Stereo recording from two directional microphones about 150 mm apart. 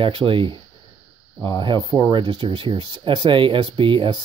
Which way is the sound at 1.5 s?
25° left (ahead or behind).